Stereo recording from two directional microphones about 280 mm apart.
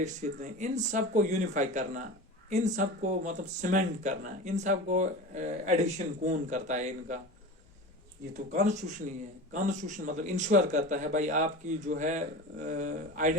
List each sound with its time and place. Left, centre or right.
0.0 s speech: right
8.3 s speech: right